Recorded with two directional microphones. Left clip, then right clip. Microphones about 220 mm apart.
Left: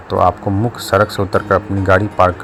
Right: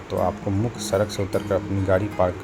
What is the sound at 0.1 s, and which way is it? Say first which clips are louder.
Speech: left 10 dB; 25° left (ahead or behind).